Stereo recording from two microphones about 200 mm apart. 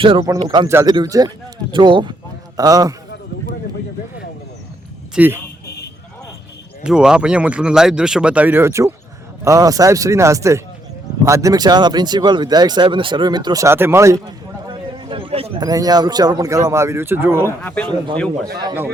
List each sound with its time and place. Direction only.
0.2 s speech: 15° right (ahead or behind)
5.1 s speech: 10° right (ahead or behind)
5.6 s vehicle: 55° left (ahead or behind)
6.8 s speech: 5° right (ahead or behind)
14.7 s a sound: 25° right (ahead or behind)
15.6 s speech: 20° right (ahead or behind)
17.6 s speech: 5° left (ahead or behind)
18.6 s speech: 10° right (ahead or behind)